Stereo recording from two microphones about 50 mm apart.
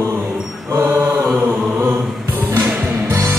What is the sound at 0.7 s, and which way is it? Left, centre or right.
Mantra, right.